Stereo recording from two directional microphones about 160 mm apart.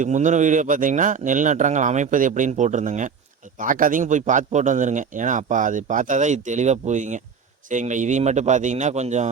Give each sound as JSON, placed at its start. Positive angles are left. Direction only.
{"t": 0.0, "sound": "a man's voice", "side_deg": -50}